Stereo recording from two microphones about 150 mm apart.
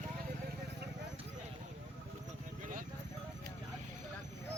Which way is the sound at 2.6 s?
65° right (ahead or behind).